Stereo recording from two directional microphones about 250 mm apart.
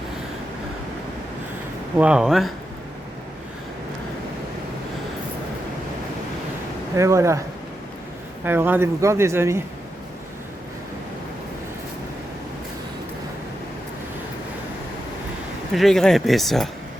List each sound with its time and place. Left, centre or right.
2.0 s speech: centre
6.9 s speech: centre
8.4 s speech: centre
15.7 s speech: centre